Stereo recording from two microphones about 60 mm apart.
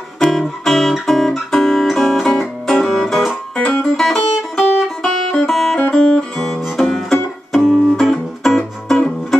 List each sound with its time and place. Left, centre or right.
0.2 s guitar: centre
3.9 s music: centre
5.9 s music: centre
7.6 s music: centre
8.0 s music: centre